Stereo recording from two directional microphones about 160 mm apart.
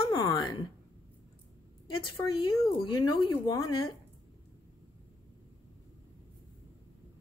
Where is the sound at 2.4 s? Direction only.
35° left (ahead or behind).